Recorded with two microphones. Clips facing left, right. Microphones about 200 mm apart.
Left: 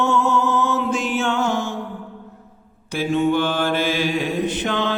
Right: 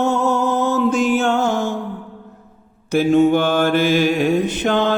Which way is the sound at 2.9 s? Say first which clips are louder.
Right 6 dB; 45° right (ahead or behind).